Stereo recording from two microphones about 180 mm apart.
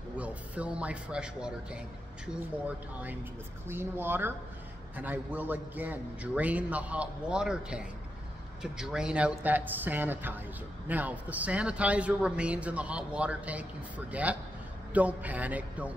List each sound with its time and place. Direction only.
0.2 s a man's voice: 5° right (ahead or behind)
3.6 s a man's voice: 10° right (ahead or behind)